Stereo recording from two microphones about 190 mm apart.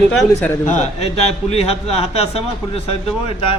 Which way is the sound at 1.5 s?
30° left (ahead or behind).